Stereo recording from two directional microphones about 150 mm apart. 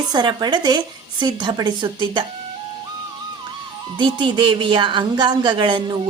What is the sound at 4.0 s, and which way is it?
Speech, 30° right (ahead or behind).